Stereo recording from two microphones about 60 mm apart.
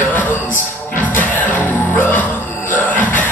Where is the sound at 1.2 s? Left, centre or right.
Left.